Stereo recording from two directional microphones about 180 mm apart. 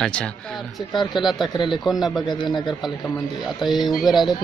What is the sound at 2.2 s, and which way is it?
Speech, 25° left (ahead or behind).